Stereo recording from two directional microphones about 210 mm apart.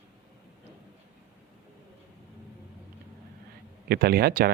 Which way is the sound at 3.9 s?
45° right (ahead or behind).